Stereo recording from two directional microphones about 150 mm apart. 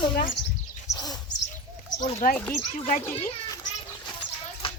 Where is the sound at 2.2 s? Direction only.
65° left (ahead or behind).